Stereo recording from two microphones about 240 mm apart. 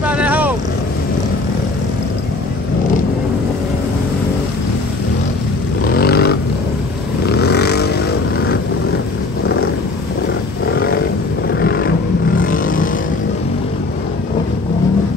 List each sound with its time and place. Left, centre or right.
0.0 s vehicle: centre
5.9 s a sound: left
7.2 s vehicle: left
10.7 s roaring cats: left
11.6 s vehicle: left